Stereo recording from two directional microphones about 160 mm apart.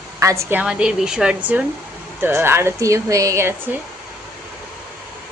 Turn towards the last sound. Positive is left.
turn(degrees=-15)  # may be behind; listen again after turning